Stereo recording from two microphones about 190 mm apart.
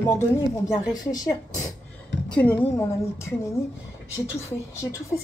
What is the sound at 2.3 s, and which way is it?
A woman's voice, 10° left (ahead or behind).